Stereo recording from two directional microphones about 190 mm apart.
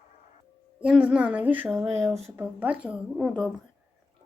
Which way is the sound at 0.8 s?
5° right (ahead or behind).